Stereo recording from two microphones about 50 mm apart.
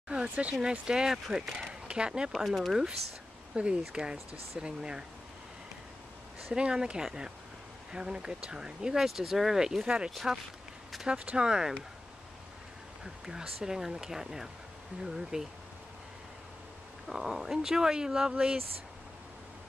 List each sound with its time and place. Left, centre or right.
0.1 s speech: right
2.3 s speech: centre
3.6 s speech: right
6.5 s speech: centre
9.8 s speech: right
10.1 s speech: centre
11.1 s speech: centre
13.0 s speech: centre
17.1 s speech: centre